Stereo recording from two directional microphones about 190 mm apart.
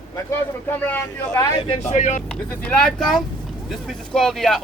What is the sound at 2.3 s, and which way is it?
Speech, 5° left (ahead or behind).